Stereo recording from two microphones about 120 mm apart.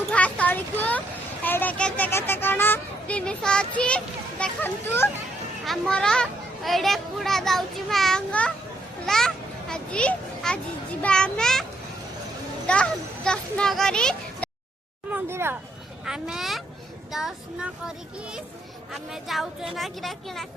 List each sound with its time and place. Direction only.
0.1 s a sound: 10° left (ahead or behind)
1.5 s speech: 15° left (ahead or behind)
5.6 s a child's voice: 5° left (ahead or behind)
12.6 s speech: 10° left (ahead or behind)
15.1 s speech: 20° right (ahead or behind)
16.0 s a child's voice: 5° right (ahead or behind)